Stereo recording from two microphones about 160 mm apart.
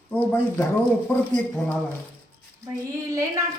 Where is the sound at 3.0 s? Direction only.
20° right (ahead or behind).